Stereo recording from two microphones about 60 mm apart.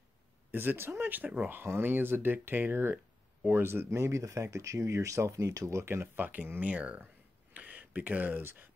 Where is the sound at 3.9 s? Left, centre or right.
Right.